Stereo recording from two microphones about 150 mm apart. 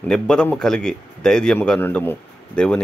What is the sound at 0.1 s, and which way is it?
A man's voice, 5° left (ahead or behind).